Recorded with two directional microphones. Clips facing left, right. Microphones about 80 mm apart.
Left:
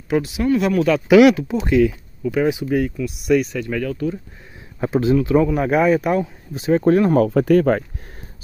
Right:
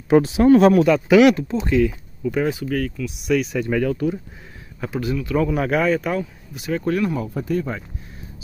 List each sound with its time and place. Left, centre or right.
0.1 s speech: right
1.0 s speech: centre
2.5 s speech: centre
3.2 s speech: centre
3.7 s speech: centre
4.7 s speech: left
5.5 s speech: centre
6.5 s speech: left
7.2 s speech: left